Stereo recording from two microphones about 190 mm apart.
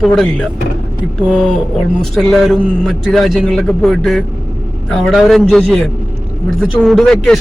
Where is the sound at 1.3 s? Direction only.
5° left (ahead or behind).